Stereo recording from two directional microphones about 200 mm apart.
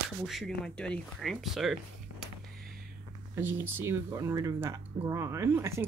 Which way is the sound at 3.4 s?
10° right (ahead or behind).